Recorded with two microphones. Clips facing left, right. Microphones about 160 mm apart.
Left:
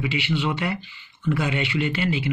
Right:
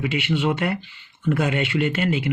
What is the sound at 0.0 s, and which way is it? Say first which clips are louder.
Speech: right 3 dB; 50° right (ahead or behind).